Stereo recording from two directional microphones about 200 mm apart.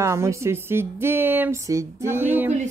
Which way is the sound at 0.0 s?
15° right (ahead or behind).